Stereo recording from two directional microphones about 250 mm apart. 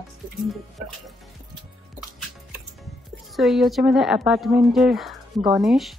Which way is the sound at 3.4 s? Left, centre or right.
Centre.